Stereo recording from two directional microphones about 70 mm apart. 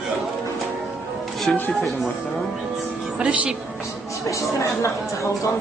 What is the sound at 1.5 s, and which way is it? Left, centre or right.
Speech, centre.